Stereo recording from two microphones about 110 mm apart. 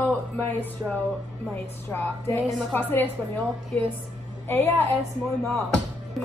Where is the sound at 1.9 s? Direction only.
20° left (ahead or behind).